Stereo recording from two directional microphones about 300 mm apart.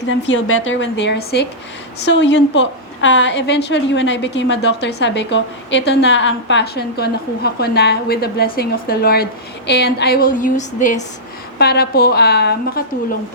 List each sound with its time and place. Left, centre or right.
0.0 s a woman's voice: left